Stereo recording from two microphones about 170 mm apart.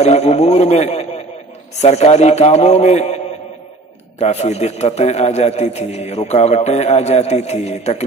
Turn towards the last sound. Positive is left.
turn(degrees=40)  # may be behind; listen again after turning